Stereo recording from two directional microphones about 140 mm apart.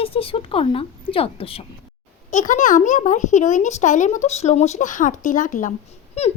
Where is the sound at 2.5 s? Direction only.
65° left (ahead or behind).